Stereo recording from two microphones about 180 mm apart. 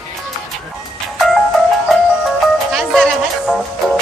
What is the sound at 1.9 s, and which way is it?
Music, centre (ahead or behind).